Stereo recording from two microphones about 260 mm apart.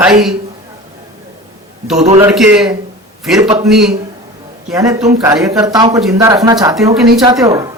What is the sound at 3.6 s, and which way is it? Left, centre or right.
Speech, centre.